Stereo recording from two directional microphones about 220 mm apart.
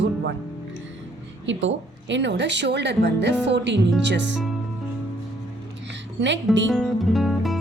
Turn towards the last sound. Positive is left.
turn(degrees=0)  # may be behind; listen again after turning